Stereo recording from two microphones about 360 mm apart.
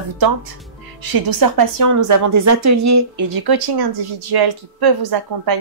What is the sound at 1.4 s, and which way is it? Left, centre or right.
A woman's voice, right.